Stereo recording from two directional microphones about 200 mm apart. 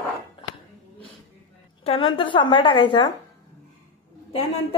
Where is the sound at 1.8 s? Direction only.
25° left (ahead or behind).